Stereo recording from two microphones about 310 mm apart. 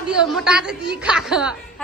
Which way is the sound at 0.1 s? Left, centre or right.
Centre.